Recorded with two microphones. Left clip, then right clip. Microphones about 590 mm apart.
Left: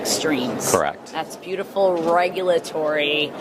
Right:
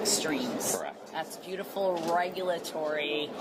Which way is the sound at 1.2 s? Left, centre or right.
Left.